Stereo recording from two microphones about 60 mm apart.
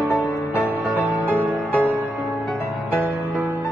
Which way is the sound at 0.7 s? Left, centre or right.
Right.